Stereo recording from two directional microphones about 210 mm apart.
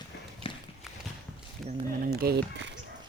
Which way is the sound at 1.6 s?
Centre (ahead or behind).